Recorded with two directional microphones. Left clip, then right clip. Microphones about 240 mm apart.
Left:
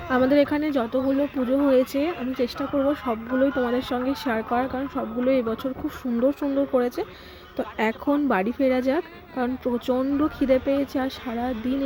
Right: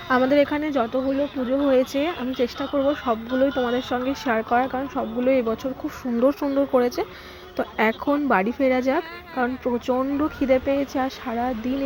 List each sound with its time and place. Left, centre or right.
0.1 s speech: centre